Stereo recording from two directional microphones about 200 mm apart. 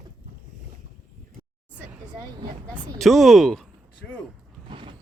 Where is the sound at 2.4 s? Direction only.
20° right (ahead or behind).